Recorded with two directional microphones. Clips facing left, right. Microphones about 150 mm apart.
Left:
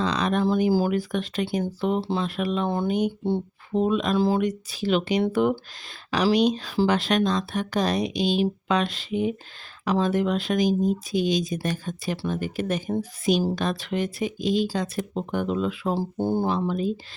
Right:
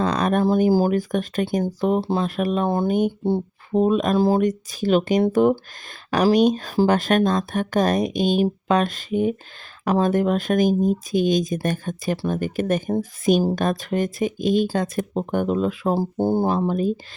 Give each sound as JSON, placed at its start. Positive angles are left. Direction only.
{"t": 0.0, "sound": "speech", "side_deg": -50}